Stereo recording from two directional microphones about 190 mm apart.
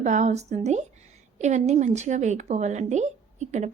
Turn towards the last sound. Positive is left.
turn(degrees=-40)  # may be behind; listen again after turning